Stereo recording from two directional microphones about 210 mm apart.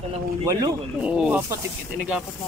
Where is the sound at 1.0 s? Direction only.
5° right (ahead or behind).